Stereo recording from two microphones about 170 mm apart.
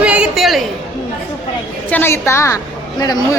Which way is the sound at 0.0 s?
5° right (ahead or behind).